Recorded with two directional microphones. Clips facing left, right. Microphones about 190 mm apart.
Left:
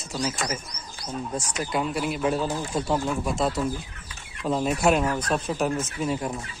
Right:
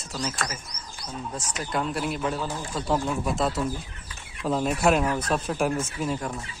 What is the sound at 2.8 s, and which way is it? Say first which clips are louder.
Speech: right 3 dB; centre (ahead or behind).